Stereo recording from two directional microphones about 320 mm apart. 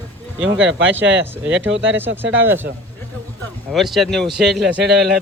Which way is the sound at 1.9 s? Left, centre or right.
Centre.